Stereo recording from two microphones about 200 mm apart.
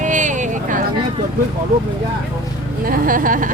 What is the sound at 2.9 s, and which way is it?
Speech, 45° right (ahead or behind).